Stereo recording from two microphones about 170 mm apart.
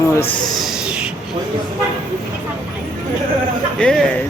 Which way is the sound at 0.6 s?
5° right (ahead or behind).